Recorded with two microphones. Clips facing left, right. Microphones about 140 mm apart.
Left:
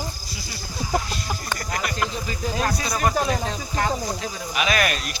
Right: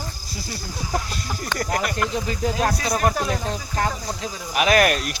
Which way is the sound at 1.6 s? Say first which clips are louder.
Right 4 dB; 55° right (ahead or behind).